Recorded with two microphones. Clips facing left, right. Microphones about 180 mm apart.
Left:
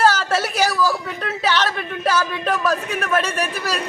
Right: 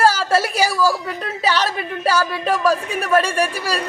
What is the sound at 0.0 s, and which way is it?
A woman's voice, 10° right (ahead or behind).